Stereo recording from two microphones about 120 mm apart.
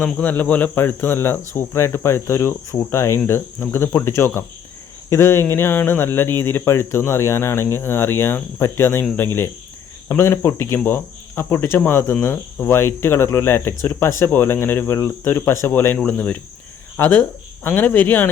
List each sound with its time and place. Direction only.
0.0 s speech: 10° left (ahead or behind)